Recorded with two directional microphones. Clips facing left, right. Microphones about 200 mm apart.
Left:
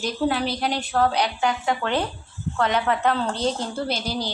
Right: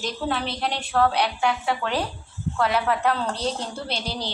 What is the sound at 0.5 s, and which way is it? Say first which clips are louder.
A woman's voice: left 1 dB; centre (ahead or behind).